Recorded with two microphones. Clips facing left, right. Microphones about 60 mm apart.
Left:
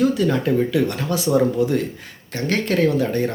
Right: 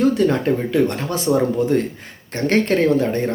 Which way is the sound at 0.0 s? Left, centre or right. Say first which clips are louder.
Right 2 dB; right.